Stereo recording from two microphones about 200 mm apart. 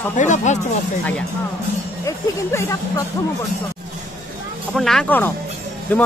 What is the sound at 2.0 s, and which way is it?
Speech, 15° left (ahead or behind).